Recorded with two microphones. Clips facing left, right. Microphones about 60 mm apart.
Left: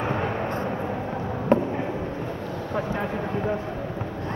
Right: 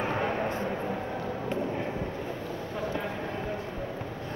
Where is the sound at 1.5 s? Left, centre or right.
Left.